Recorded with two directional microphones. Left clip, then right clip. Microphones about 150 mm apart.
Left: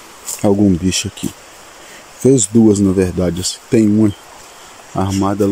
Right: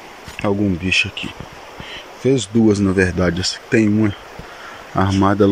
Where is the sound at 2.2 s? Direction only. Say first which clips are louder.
Left 5 dB; 35° left (ahead or behind).